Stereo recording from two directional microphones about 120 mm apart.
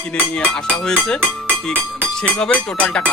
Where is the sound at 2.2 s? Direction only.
10° left (ahead or behind).